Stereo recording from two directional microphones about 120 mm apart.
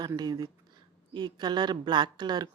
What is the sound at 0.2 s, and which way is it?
Speech, 35° right (ahead or behind).